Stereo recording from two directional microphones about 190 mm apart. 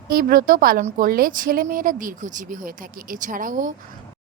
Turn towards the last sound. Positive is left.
turn(degrees=-45)  # may be behind; listen again after turning